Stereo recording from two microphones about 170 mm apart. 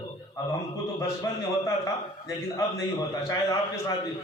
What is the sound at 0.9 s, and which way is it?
A man's voice, 15° left (ahead or behind).